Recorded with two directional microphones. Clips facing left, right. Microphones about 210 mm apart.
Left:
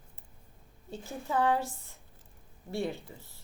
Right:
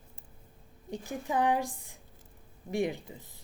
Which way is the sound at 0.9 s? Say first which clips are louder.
Right 1 dB; 15° right (ahead or behind).